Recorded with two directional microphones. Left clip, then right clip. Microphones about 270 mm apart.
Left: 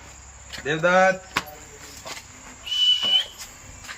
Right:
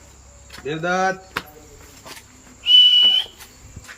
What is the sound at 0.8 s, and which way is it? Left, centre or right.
Speech, centre.